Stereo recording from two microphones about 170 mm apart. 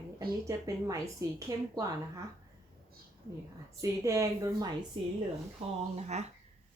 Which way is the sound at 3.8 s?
20° right (ahead or behind).